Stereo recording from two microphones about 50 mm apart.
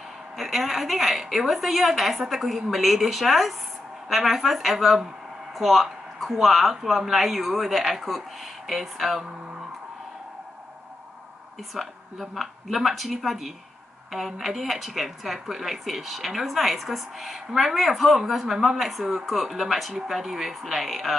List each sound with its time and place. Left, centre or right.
0.4 s a woman's voice: centre
11.7 s a woman's voice: centre